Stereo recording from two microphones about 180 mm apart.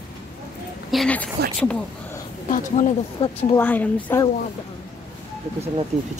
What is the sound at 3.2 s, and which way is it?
Speech, 30° left (ahead or behind).